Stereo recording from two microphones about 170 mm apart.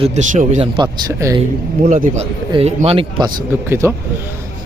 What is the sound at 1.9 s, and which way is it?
Speech, 45° right (ahead or behind).